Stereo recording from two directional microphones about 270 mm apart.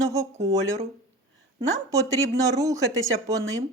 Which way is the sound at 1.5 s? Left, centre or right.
Centre.